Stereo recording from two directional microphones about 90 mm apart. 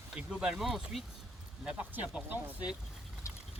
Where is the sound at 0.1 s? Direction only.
10° right (ahead or behind).